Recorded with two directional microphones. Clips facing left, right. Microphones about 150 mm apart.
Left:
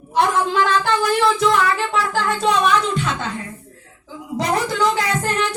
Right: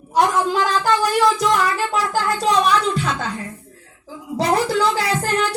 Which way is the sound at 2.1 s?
35° right (ahead or behind).